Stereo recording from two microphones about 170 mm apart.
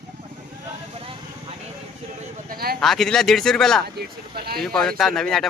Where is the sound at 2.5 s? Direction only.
65° right (ahead or behind).